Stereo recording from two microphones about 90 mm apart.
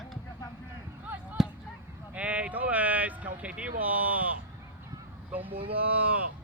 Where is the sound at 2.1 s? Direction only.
15° right (ahead or behind).